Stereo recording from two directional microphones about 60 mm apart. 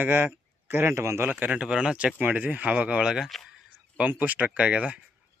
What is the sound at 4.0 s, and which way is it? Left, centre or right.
Speech, right.